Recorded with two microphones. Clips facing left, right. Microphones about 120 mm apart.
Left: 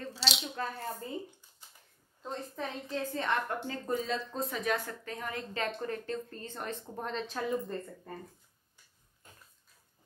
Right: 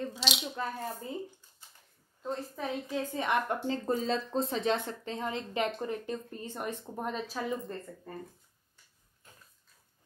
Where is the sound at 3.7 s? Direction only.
30° right (ahead or behind); by 7.6 s 5° right (ahead or behind).